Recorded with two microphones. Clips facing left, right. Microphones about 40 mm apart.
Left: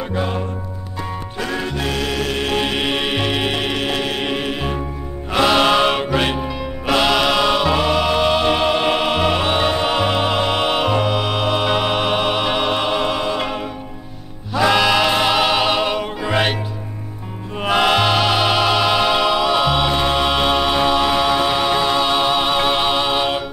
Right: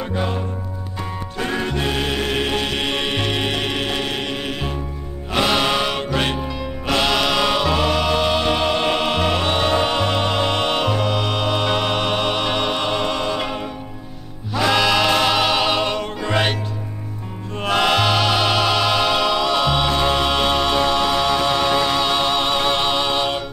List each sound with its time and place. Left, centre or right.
1.6 s music: centre
2.5 s music: centre
5.6 s music: left
5.9 s music: centre
17.6 s music: centre
20.2 s a capella: centre